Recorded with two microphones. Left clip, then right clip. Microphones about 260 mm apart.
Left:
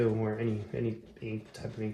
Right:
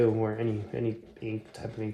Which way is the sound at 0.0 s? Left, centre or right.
Right.